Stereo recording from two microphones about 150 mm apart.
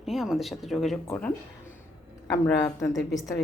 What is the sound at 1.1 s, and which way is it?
Speech, 10° left (ahead or behind).